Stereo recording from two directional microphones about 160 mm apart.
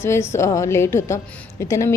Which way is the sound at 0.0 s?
15° left (ahead or behind).